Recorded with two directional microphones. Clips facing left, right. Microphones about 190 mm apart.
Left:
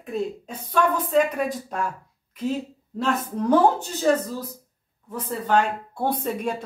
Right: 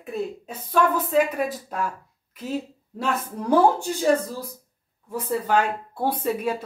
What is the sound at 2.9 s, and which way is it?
Speech, 10° right (ahead or behind).